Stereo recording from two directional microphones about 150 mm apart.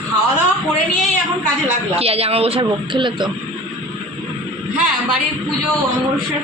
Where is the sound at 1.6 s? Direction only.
40° right (ahead or behind).